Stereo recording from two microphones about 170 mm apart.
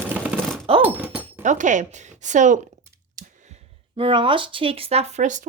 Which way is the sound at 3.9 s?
30° right (ahead or behind).